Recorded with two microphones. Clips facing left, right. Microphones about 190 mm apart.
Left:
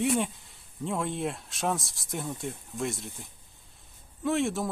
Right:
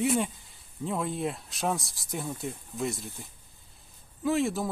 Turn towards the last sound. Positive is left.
turn(degrees=0)  # may be behind; listen again after turning